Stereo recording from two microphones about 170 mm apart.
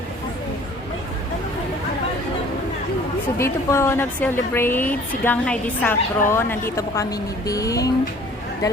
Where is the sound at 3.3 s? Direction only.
15° left (ahead or behind).